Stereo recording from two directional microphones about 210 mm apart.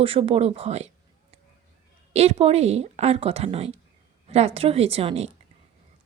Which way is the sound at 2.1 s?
30° right (ahead or behind).